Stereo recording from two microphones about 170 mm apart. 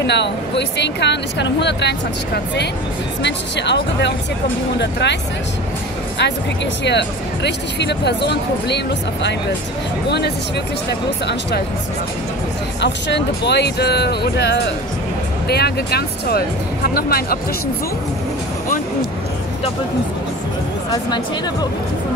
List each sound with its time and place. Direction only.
0.0 s speech: 90° left
6.1 s speech: 90° left
12.8 s speech: 90° left; by 17.4 s 65° left (ahead or behind)